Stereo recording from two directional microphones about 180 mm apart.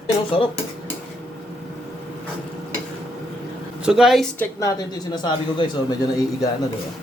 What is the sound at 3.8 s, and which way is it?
Speech, 5° right (ahead or behind).